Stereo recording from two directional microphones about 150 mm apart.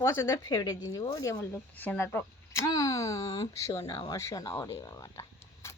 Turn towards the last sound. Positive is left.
turn(degrees=20)  # may be behind; listen again after turning